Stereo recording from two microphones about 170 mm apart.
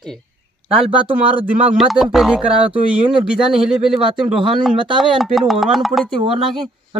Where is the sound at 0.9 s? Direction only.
30° right (ahead or behind).